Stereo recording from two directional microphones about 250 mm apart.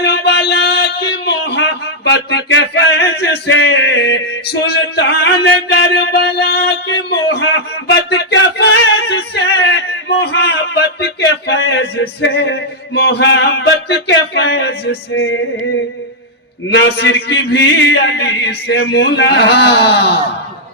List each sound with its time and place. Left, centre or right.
0.0 s a sound: left
8.1 s male singing: left
15.1 s music: left
16.7 s speech: left